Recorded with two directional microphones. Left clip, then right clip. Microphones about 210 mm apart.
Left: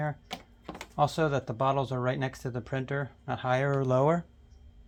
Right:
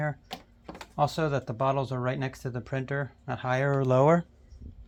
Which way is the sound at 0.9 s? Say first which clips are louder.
Even; 15° right (ahead or behind).